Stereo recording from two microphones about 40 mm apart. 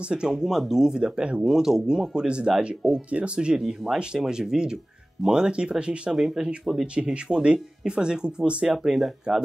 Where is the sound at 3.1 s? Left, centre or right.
Right.